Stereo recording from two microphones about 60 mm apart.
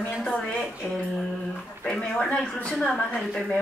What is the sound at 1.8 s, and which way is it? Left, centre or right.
Speech, centre.